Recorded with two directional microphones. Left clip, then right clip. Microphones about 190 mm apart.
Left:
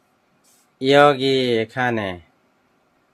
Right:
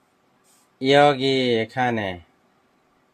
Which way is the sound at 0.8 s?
15° left (ahead or behind).